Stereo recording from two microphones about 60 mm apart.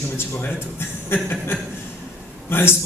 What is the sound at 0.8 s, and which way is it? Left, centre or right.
A man's voice, left.